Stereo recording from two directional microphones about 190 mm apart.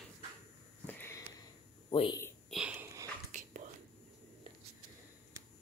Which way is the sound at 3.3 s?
40° right (ahead or behind).